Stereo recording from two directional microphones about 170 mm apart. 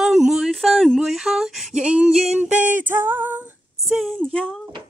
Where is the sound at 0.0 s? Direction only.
5° right (ahead or behind).